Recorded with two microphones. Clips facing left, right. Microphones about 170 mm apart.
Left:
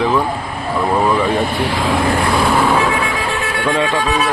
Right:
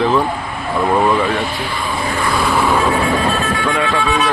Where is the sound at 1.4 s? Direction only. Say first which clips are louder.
Left 4 dB; 60° left (ahead or behind); by 2.0 s 90° left.